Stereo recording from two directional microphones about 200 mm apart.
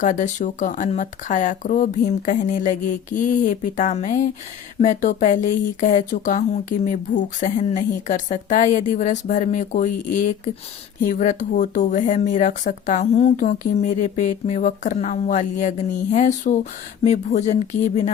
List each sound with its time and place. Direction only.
0.0 s speech: 40° left (ahead or behind)